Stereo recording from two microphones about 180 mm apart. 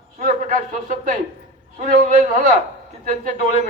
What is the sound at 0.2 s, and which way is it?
A man's voice, 50° right (ahead or behind).